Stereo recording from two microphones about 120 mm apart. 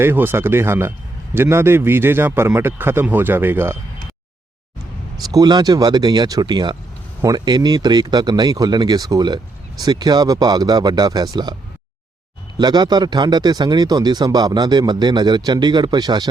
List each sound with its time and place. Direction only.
0.0 s a man's voice: 20° right (ahead or behind)
5.2 s speech: 30° right (ahead or behind)
12.5 s speech: 35° right (ahead or behind)